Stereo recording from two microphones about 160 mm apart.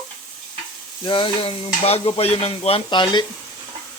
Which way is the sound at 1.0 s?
30° left (ahead or behind).